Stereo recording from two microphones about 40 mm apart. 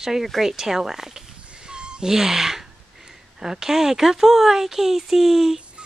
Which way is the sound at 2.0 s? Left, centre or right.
Centre.